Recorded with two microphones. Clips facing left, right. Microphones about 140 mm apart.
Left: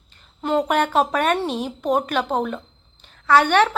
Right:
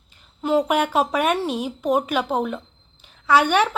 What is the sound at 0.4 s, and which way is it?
A woman's voice, 10° right (ahead or behind).